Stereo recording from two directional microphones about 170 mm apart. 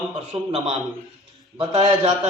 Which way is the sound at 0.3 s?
35° right (ahead or behind).